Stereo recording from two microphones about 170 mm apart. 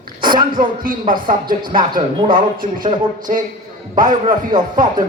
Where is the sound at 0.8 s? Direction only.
55° right (ahead or behind).